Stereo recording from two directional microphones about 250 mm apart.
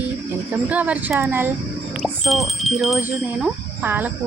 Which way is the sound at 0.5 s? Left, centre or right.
Centre.